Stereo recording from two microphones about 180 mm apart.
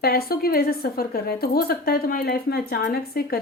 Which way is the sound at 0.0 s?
55° left (ahead or behind).